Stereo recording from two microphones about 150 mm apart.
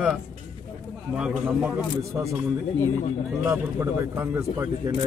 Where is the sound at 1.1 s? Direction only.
5° right (ahead or behind).